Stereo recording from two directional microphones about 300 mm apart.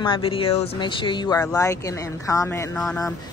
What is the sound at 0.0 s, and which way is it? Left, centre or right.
Speech, centre.